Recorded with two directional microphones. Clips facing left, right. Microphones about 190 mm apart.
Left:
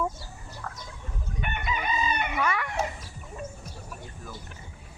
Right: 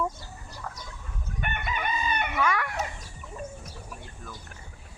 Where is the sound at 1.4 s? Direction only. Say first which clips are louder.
Even; 55° right (ahead or behind).